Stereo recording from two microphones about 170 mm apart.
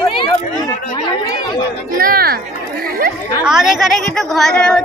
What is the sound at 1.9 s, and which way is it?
Speech, 60° right (ahead or behind).